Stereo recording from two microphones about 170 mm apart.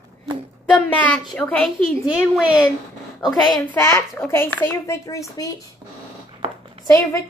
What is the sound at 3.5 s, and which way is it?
Speech, 10° left (ahead or behind).